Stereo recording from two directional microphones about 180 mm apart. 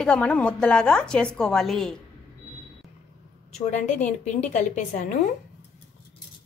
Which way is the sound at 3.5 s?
40° left (ahead or behind).